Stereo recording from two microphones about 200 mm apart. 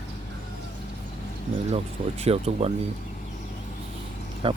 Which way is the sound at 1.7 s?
30° right (ahead or behind).